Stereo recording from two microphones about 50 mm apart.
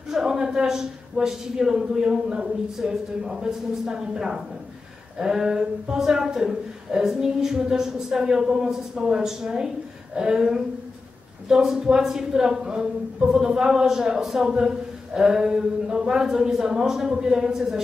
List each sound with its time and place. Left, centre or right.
0.1 s a woman's voice: centre